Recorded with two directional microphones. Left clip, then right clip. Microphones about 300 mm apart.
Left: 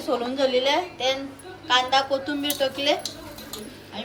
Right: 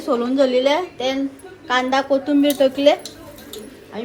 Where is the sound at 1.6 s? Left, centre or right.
Right.